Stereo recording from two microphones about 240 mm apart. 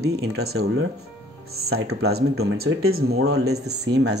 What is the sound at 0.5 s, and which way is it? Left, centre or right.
Speech, right.